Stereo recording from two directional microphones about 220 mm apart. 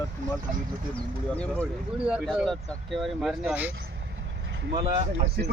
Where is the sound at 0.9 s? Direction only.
5° left (ahead or behind).